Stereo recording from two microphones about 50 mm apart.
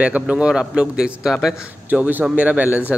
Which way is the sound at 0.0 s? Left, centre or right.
Right.